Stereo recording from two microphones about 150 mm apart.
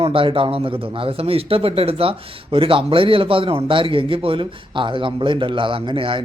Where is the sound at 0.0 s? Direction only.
35° right (ahead or behind).